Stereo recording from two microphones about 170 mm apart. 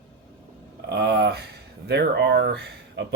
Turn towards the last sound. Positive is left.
turn(degrees=-80)